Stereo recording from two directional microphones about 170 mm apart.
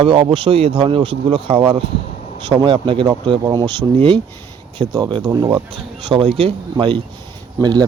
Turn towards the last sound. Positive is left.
turn(degrees=-25)  # may be behind; listen again after turning